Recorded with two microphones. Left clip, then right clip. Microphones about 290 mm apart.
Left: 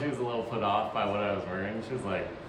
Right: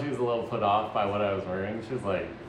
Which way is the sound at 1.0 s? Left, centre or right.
Centre.